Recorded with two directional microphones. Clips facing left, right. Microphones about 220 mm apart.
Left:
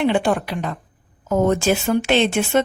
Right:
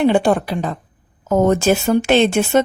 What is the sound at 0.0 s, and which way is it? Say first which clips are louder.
Speech: right 4 dB; 35° right (ahead or behind).